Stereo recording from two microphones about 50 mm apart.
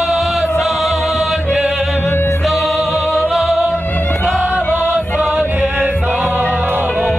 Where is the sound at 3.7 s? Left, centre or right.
Left.